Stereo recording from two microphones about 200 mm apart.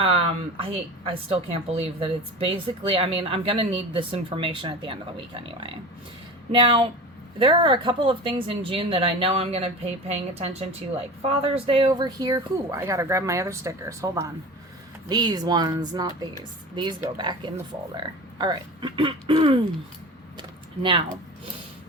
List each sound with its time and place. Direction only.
0.0 s speech: 30° right (ahead or behind)